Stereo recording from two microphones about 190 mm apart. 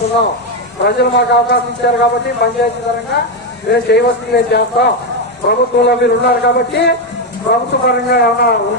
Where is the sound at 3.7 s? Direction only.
60° left (ahead or behind).